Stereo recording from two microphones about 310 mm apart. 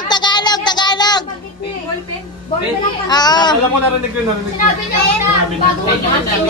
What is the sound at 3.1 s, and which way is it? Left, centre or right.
Speech, centre.